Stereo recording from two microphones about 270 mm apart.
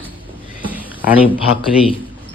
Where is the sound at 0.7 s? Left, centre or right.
Centre.